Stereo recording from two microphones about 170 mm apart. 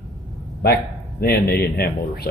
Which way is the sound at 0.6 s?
65° left (ahead or behind).